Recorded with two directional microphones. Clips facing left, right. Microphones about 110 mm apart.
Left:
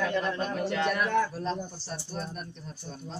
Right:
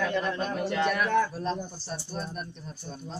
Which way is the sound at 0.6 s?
15° right (ahead or behind).